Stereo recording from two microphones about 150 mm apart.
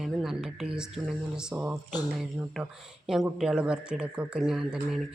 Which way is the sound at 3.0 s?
5° right (ahead or behind).